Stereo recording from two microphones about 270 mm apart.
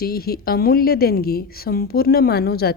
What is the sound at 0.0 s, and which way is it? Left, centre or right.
A woman's voice, left.